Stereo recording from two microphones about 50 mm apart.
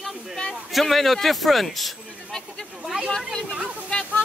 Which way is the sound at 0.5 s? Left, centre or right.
Centre.